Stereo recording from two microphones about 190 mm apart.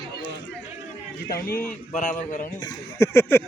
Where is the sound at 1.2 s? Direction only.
55° left (ahead or behind).